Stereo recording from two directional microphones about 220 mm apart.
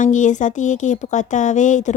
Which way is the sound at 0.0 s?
35° left (ahead or behind).